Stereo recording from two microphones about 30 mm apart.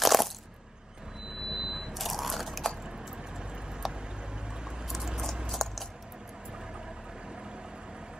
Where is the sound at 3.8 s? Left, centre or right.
Centre.